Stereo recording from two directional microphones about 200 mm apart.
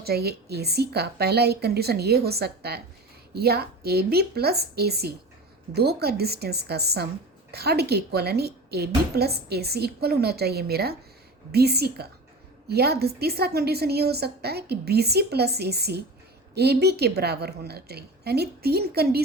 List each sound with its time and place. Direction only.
0.0 s a woman's voice: 50° right (ahead or behind)